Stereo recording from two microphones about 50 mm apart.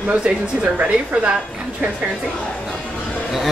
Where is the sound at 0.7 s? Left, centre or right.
Right.